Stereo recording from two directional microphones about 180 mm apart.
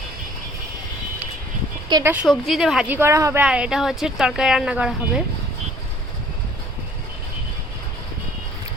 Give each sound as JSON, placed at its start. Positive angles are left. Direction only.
{"t": 1.9, "sound": "speech", "side_deg": -25}
{"t": 2.2, "sound": "speech", "side_deg": 0}
{"t": 3.4, "sound": "speech", "side_deg": -5}